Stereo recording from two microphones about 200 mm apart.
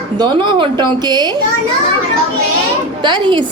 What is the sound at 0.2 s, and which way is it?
A woman's voice, 20° right (ahead or behind).